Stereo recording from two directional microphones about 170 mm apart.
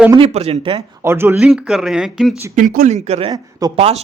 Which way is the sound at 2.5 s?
55° right (ahead or behind).